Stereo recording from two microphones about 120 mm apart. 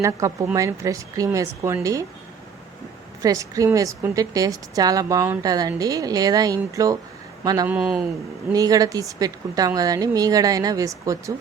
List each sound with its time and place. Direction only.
0.0 s a woman's voice: 25° right (ahead or behind)
3.2 s a woman's voice: 30° right (ahead or behind)
7.7 s speech: 5° right (ahead or behind)
8.5 s a woman's voice: 30° right (ahead or behind)